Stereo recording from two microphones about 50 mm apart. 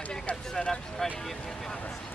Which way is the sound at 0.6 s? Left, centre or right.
Centre.